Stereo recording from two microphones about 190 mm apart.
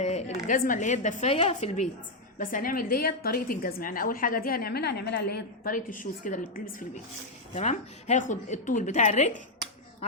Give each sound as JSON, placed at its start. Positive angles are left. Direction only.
{"t": 0.0, "sound": "a woman's voice", "side_deg": 35}